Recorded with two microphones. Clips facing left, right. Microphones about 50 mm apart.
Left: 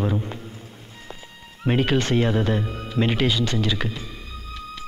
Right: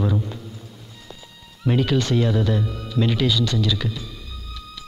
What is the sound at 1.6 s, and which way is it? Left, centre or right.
Speech, left.